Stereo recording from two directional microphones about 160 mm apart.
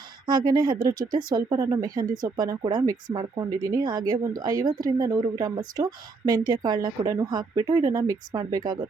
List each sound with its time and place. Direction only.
0.3 s speech: 25° right (ahead or behind)